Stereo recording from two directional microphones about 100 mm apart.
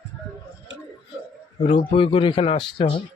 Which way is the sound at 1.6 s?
70° left (ahead or behind).